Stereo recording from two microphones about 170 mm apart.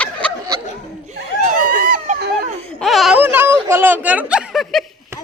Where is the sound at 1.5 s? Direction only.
50° right (ahead or behind).